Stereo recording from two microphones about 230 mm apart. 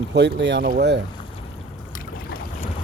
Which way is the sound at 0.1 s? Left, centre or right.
Right.